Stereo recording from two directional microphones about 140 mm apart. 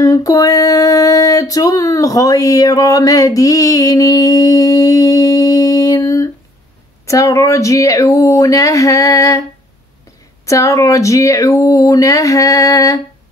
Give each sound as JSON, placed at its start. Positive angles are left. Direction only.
{"t": 0.0, "sound": "a sound", "side_deg": 25}
{"t": 7.1, "sound": "speech", "side_deg": 20}
{"t": 10.4, "sound": "speech", "side_deg": 20}